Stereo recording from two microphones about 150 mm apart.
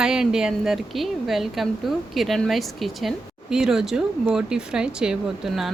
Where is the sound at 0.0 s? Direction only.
5° right (ahead or behind).